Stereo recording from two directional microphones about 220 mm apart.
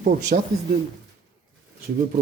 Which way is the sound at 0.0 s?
40° right (ahead or behind).